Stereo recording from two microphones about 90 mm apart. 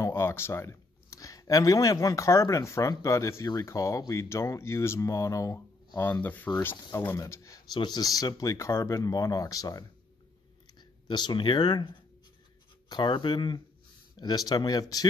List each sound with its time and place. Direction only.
0.0 s speech: 30° left (ahead or behind)
6.2 s speech: 20° left (ahead or behind)
7.2 s speech: 35° left (ahead or behind)
7.7 s speech: 50° left (ahead or behind)
10.8 s speech: 55° left (ahead or behind)